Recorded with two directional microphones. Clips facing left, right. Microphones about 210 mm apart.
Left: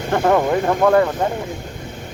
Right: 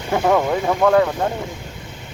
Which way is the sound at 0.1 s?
Centre (ahead or behind).